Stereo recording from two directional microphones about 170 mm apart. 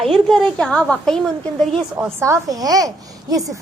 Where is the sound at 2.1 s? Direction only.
15° right (ahead or behind).